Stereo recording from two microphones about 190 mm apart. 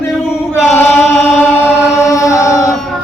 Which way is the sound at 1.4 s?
10° left (ahead or behind).